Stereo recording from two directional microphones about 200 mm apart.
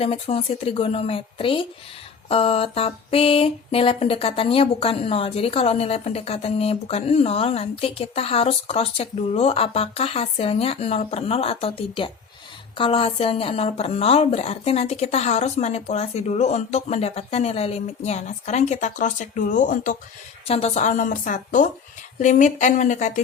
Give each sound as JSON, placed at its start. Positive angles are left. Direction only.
{"t": 0.0, "sound": "a sound", "side_deg": 30}
{"t": 12.7, "sound": "a woman's voice", "side_deg": 25}
{"t": 20.5, "sound": "a woman's voice", "side_deg": 30}